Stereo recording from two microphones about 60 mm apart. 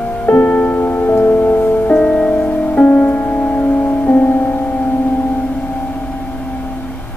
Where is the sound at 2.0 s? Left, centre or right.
Centre.